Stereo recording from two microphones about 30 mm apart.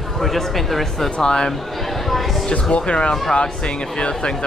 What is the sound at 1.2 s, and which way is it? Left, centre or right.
Speech, left.